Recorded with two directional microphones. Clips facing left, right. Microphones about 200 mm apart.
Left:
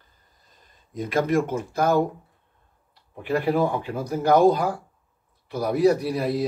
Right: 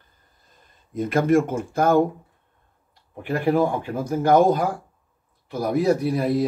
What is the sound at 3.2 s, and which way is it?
Speech, 50° right (ahead or behind).